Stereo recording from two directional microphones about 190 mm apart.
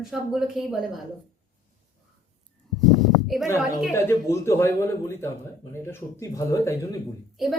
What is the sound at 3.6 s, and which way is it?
Speech, centre (ahead or behind).